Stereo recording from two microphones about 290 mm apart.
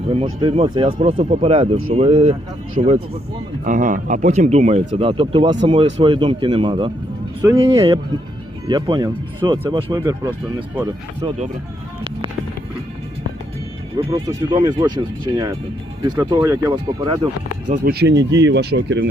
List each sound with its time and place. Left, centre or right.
0.4 s speech: centre
13.9 s speech: centre
18.0 s speech: right